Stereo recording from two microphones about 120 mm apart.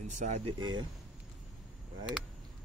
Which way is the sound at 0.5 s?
35° right (ahead or behind).